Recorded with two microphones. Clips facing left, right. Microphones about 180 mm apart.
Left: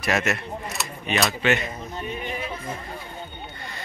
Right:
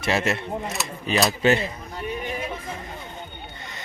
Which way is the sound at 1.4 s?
35° right (ahead or behind).